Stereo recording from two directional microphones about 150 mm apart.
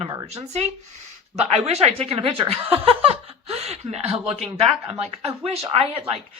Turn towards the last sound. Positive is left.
turn(degrees=-40)  # may be behind; listen again after turning